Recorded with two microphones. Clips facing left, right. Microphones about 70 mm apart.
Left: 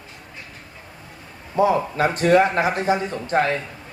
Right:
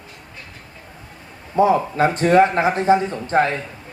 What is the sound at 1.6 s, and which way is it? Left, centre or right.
Speech, right.